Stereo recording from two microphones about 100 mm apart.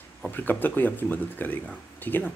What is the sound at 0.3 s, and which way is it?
Speech, 20° left (ahead or behind).